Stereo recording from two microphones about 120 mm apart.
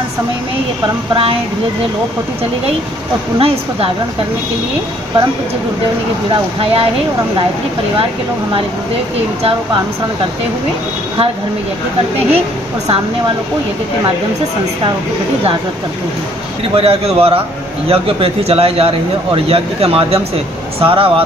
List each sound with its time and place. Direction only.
3.3 s speech: 50° right (ahead or behind)
6.6 s speech: 55° right (ahead or behind)
16.7 s a man's voice: 55° right (ahead or behind)